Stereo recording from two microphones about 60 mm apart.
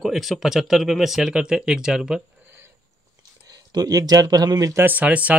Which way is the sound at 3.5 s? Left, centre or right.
Right.